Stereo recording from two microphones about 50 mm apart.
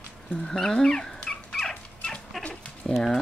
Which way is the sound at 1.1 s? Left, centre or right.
Centre.